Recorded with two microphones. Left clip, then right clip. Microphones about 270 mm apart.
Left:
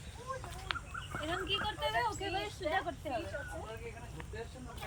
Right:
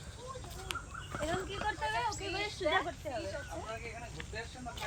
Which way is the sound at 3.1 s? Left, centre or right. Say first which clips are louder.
Left 1 dB; right.